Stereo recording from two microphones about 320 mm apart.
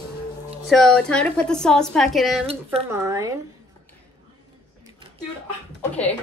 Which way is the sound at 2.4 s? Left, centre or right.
Centre.